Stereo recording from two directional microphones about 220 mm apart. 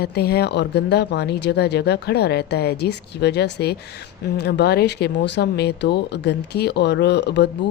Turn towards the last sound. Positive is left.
turn(degrees=50)  # may be behind; listen again after turning